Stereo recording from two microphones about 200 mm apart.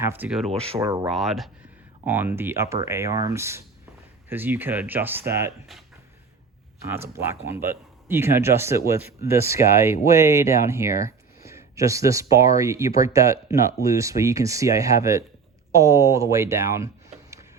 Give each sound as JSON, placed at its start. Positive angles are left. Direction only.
{"t": 0.0, "sound": "speech", "side_deg": -10}
{"t": 0.8, "sound": "speech", "side_deg": -15}
{"t": 1.1, "sound": "speech", "side_deg": 0}
{"t": 6.9, "sound": "speech", "side_deg": -10}